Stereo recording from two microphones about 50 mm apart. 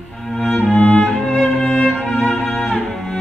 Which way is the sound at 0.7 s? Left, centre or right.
Left.